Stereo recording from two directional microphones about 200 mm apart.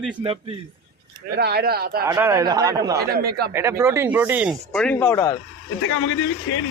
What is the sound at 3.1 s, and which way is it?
Speech, 50° right (ahead or behind).